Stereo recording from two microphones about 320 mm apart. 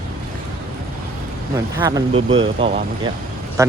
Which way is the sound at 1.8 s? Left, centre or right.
Centre.